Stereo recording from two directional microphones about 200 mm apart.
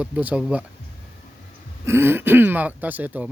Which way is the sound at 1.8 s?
10° right (ahead or behind).